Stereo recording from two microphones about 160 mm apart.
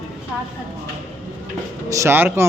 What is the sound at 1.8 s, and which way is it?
Speech, 20° right (ahead or behind).